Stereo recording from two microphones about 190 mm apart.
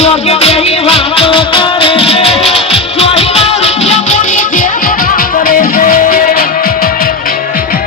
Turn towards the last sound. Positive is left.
turn(degrees=50)  # may be behind; listen again after turning